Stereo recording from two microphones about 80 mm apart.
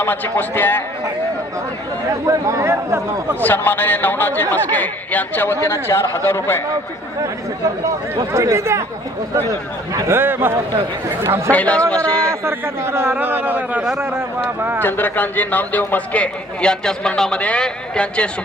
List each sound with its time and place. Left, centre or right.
0.0 s a man's voice: left
2.2 s speech: right
3.4 s a man's voice: left
5.5 s speech: left
8.1 s speech: right
10.1 s a man's voice: right
11.5 s a man's voice: centre
12.3 s a man's voice: right
14.8 s a man's voice: left